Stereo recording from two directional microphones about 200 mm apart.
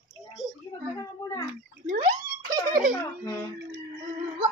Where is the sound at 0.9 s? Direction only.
15° left (ahead or behind).